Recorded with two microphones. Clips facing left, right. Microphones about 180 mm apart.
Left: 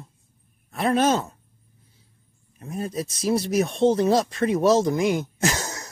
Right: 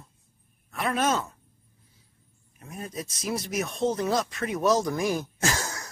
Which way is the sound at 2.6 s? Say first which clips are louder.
Left 7 dB; 30° left (ahead or behind).